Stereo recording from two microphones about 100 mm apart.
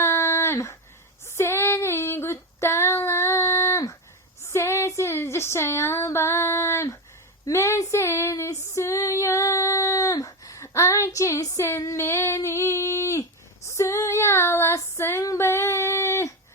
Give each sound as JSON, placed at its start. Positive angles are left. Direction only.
{"t": 0.0, "sound": "a sound", "side_deg": 25}
{"t": 1.4, "sound": "female singing", "side_deg": 25}
{"t": 4.5, "sound": "music", "side_deg": 25}
{"t": 7.4, "sound": "female singing", "side_deg": 30}